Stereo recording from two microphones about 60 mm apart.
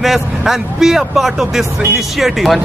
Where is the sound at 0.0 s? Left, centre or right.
Centre.